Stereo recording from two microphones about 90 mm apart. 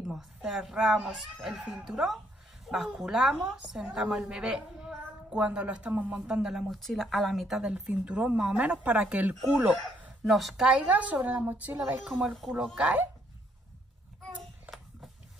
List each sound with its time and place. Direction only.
0.0 s a woman's voice: 5° right (ahead or behind)
9.8 s speech: centre (ahead or behind)
10.7 s a woman's voice: 15° right (ahead or behind)
12.1 s a woman's voice: centre (ahead or behind)
12.7 s a woman's voice: 15° right (ahead or behind)
14.7 s a sound: 20° right (ahead or behind)